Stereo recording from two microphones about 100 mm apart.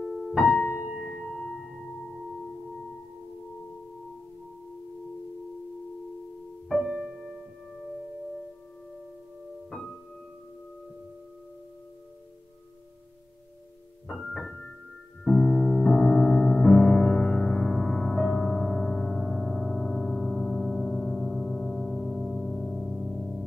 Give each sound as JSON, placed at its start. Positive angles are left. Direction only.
{"t": 0.0, "sound": "music", "side_deg": 5}
{"t": 0.8, "sound": "singing bowl", "side_deg": 0}
{"t": 6.7, "sound": "music", "side_deg": 0}
{"t": 9.7, "sound": "music", "side_deg": 5}
{"t": 14.0, "sound": "music", "side_deg": 0}